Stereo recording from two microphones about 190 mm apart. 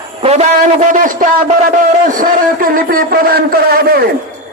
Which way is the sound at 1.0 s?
45° right (ahead or behind).